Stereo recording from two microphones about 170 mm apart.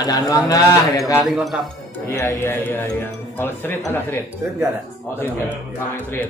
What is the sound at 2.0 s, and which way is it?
Speech, 15° left (ahead or behind).